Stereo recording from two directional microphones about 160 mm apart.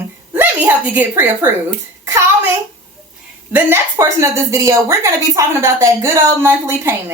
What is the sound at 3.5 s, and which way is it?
A woman's voice, 15° right (ahead or behind).